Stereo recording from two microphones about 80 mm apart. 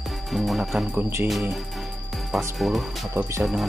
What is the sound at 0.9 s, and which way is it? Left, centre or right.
Speech, right.